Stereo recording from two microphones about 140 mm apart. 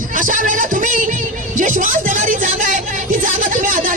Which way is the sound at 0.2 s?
70° right (ahead or behind).